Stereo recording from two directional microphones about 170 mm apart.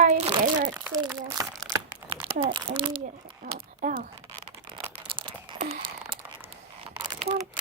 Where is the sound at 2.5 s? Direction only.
30° right (ahead or behind).